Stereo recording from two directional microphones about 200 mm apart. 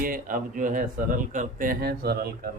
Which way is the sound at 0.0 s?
45° right (ahead or behind).